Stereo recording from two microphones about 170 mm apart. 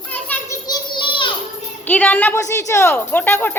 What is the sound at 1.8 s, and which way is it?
A woman's voice, 10° left (ahead or behind).